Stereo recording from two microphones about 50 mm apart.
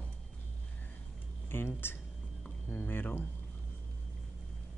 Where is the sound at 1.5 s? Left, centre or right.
Left.